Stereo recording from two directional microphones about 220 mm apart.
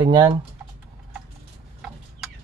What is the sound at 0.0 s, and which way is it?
Speech, 20° right (ahead or behind).